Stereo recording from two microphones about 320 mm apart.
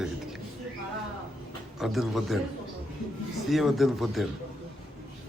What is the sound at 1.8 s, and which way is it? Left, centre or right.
Speech, centre.